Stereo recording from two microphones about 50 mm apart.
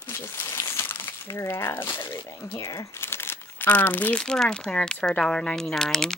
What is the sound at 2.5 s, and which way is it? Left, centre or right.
Speech, left.